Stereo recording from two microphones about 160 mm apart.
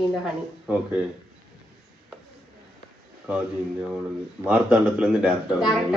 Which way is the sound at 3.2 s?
5° right (ahead or behind).